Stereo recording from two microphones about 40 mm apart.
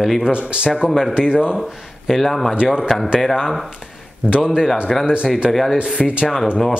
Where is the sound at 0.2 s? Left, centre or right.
Right.